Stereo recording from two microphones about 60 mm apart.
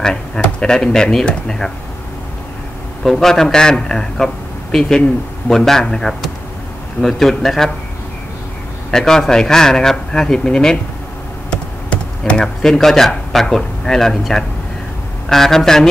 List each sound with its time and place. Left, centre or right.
0.0 s speech: centre
3.0 s a man's voice: centre
8.9 s speech: centre
11.5 s computer keyboard: centre
12.6 s speech: centre